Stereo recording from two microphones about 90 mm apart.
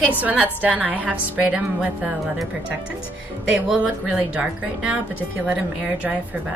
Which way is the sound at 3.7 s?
15° right (ahead or behind).